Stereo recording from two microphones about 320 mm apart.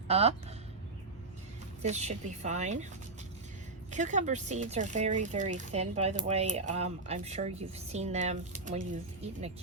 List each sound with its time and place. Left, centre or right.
0.1 s speech: centre
1.8 s speech: right
3.9 s speech: right